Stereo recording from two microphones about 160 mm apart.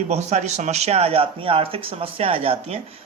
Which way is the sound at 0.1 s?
45° right (ahead or behind).